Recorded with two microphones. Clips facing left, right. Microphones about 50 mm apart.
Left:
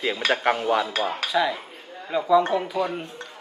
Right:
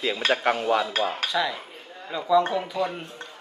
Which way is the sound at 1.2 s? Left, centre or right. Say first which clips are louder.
Left 3 dB; centre.